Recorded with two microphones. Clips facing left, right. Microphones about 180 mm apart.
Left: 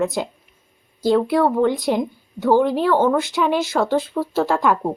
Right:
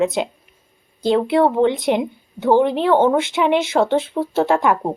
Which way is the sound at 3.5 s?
65° right (ahead or behind).